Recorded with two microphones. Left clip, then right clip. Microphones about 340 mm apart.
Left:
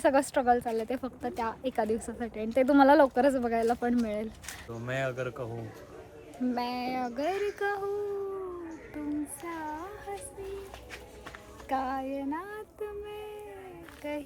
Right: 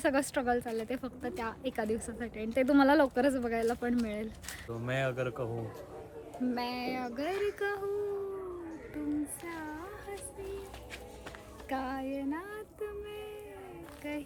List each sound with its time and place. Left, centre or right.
0.0 s speech: centre
4.7 s speech: centre
6.5 s speech: centre
9.0 s child singing: centre
11.7 s speech: centre